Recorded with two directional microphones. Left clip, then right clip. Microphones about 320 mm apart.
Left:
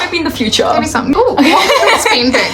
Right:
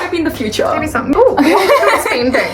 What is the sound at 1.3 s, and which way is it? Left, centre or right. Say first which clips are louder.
Speech: left 1 dB; left.